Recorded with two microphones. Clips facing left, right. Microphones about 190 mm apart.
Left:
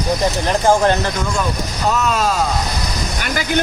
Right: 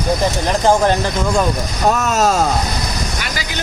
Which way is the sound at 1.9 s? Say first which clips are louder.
Right 2 dB; 45° right (ahead or behind).